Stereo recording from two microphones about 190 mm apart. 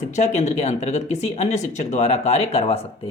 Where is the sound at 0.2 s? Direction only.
35° left (ahead or behind).